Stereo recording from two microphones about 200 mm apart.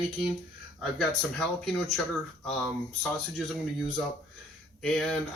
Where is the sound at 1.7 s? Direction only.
Centre (ahead or behind).